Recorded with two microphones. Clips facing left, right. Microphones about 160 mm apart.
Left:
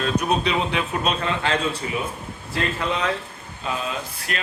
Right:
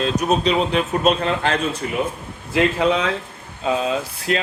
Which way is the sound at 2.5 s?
90° right.